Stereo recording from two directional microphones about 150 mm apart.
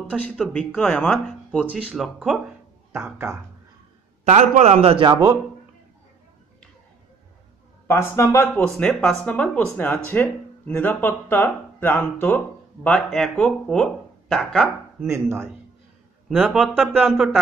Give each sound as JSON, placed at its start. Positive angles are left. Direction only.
{"t": 0.5, "sound": "speech", "side_deg": 10}
{"t": 1.7, "sound": "speech", "side_deg": -5}
{"t": 4.2, "sound": "a man's voice", "side_deg": -50}
{"t": 7.9, "sound": "speech", "side_deg": 15}
{"t": 8.7, "sound": "speech", "side_deg": 5}
{"t": 15.0, "sound": "speech", "side_deg": -20}